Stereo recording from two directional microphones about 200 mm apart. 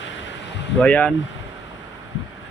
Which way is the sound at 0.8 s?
5° left (ahead or behind).